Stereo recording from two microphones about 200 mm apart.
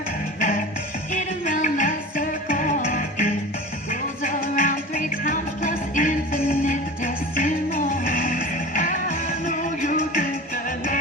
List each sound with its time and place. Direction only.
0.3 s music: 40° left (ahead or behind)